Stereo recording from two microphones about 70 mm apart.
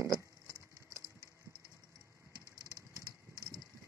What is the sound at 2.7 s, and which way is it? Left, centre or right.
Vehicle, right.